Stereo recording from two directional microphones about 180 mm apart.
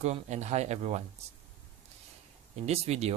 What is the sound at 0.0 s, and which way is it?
Speech, 40° right (ahead or behind).